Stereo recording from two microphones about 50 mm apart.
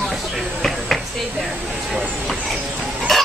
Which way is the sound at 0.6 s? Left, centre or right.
Centre.